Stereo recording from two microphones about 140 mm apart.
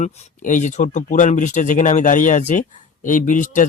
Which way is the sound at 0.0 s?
55° left (ahead or behind).